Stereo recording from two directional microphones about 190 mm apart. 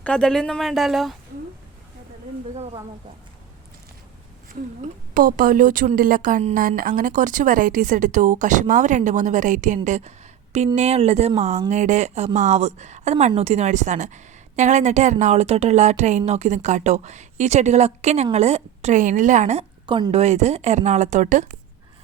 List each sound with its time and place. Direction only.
0.0 s a woman's voice: 5° left (ahead or behind)
5.1 s a woman's voice: 45° right (ahead or behind)